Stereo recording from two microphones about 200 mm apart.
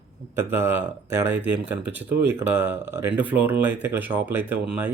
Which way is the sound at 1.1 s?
10° right (ahead or behind).